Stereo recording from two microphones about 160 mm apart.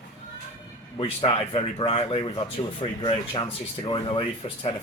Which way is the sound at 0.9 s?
35° left (ahead or behind).